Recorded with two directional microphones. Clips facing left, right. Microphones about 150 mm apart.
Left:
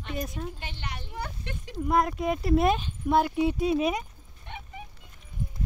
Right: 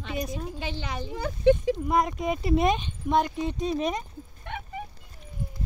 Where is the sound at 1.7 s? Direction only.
Centre (ahead or behind).